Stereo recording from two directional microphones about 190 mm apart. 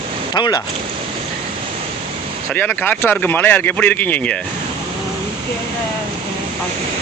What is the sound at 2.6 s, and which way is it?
Speech, 10° left (ahead or behind).